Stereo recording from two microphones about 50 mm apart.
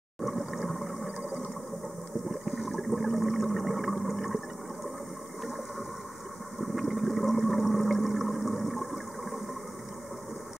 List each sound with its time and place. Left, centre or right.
0.2 s water: centre
1.0 s a sound: centre
2.4 s toilet flush: centre
6.6 s toilet flush: centre